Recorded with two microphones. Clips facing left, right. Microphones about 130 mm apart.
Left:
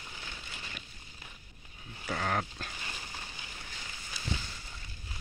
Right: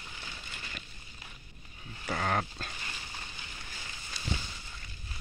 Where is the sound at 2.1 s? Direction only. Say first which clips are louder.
Right 1 dB; 5° right (ahead or behind).